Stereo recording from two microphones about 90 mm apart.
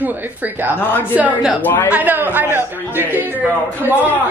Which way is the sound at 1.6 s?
20° left (ahead or behind).